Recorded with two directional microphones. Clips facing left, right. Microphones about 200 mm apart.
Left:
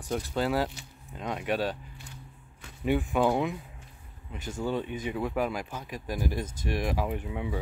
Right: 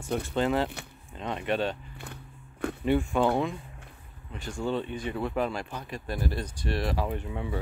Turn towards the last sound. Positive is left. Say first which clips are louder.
# even
turn(degrees=10)  # may be behind; listen again after turning